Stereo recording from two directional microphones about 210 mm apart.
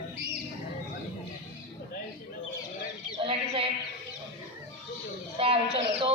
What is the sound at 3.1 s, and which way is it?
Sheep, 25° right (ahead or behind).